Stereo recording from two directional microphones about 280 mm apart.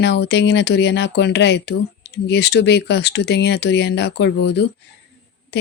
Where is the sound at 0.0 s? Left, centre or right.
Left.